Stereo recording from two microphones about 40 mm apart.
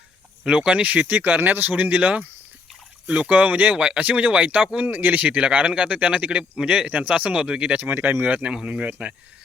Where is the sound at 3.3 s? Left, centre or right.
Right.